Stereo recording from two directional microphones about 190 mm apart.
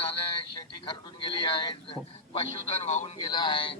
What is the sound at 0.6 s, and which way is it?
A man's voice, 25° left (ahead or behind).